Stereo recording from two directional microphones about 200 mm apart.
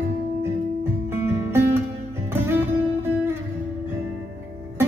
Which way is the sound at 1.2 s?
15° right (ahead or behind).